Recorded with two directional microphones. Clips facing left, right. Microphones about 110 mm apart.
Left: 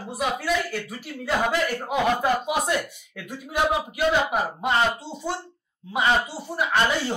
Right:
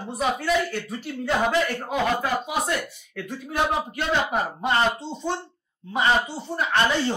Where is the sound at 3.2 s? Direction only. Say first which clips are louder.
Left 1 dB; 10° left (ahead or behind).